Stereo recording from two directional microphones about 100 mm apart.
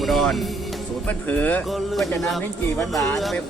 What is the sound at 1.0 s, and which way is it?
Speech, 15° left (ahead or behind).